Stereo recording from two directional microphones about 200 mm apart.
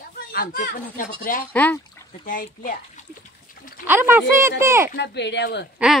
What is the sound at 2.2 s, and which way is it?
Speech, 40° left (ahead or behind).